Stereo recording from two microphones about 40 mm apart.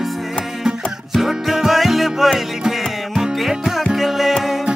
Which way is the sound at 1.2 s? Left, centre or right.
Centre.